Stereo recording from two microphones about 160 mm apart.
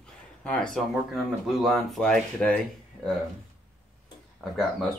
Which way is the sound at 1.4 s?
Centre (ahead or behind).